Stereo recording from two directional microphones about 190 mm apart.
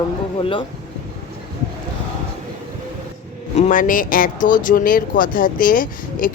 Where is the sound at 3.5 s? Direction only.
45° left (ahead or behind).